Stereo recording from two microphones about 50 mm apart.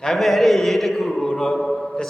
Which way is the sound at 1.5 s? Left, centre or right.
Centre.